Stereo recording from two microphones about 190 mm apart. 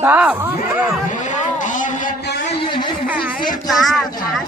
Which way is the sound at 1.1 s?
40° left (ahead or behind).